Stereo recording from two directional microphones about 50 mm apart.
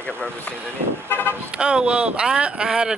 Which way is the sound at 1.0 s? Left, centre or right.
Left.